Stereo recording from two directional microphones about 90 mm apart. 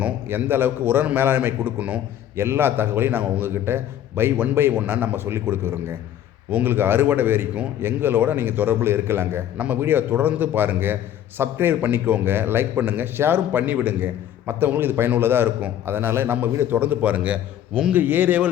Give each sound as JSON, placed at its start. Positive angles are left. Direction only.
{"t": 0.0, "sound": "a man's voice", "side_deg": -25}